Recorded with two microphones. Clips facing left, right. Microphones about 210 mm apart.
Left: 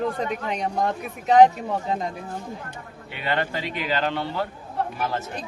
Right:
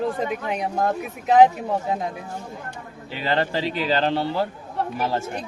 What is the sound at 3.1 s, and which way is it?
Speech, 30° right (ahead or behind).